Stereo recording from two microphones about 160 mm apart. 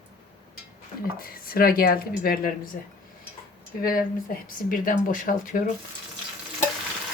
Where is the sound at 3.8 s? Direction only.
65° left (ahead or behind).